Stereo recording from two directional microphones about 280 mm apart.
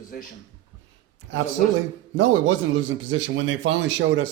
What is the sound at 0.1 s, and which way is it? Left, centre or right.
Speech, left.